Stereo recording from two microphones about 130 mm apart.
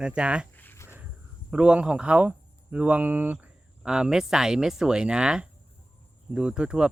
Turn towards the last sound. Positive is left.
turn(degrees=-5)  # may be behind; listen again after turning